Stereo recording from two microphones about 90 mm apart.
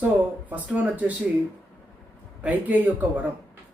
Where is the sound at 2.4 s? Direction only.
20° right (ahead or behind).